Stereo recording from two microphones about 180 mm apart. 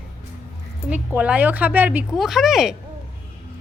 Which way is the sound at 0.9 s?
5° right (ahead or behind).